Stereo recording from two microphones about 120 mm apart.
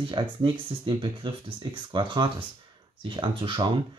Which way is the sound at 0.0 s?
45° right (ahead or behind).